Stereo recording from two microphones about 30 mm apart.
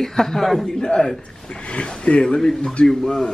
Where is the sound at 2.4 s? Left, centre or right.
Centre.